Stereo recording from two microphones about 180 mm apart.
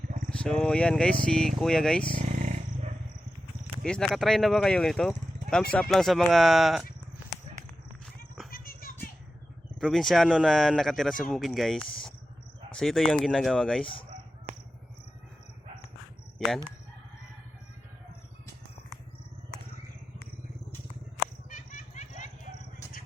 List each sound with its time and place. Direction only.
0.3 s speech: 5° left (ahead or behind)
2.1 s wild animals: 45° right (ahead or behind)
3.8 s speech: 5° left (ahead or behind)
8.4 s a sound: 55° left (ahead or behind)
9.8 s speech: centre (ahead or behind)
21.5 s vehicle: 45° left (ahead or behind)